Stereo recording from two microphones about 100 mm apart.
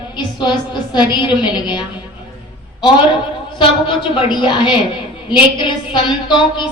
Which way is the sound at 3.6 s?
55° left (ahead or behind).